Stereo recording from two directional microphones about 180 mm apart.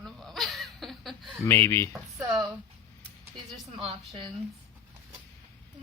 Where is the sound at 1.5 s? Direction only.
15° left (ahead or behind).